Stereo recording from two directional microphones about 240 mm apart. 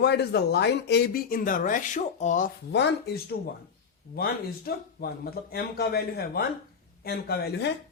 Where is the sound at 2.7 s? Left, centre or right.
Left.